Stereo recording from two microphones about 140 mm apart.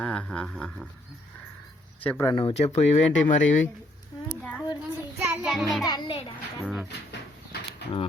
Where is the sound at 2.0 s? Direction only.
15° left (ahead or behind).